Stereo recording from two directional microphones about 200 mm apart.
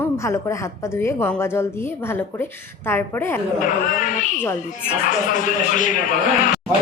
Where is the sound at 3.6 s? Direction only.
40° left (ahead or behind).